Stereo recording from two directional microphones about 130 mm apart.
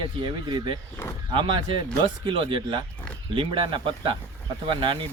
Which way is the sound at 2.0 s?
40° right (ahead or behind).